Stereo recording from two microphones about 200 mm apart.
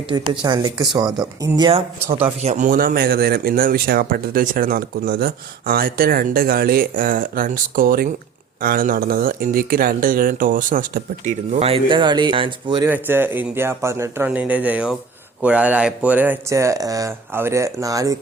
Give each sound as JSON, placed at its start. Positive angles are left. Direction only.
{"t": 0.1, "sound": "speech", "side_deg": -20}
{"t": 12.9, "sound": "speech", "side_deg": -10}